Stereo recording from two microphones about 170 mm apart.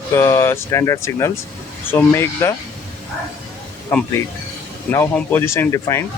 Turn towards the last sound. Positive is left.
turn(degrees=15)  # may be behind; listen again after turning